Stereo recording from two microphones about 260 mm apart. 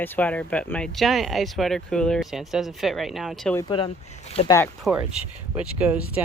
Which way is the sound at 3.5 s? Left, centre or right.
Centre.